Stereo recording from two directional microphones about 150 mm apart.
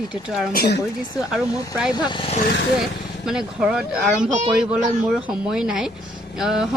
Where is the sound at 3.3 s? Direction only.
5° right (ahead or behind).